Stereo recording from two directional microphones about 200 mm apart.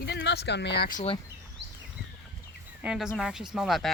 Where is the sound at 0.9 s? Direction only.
30° left (ahead or behind).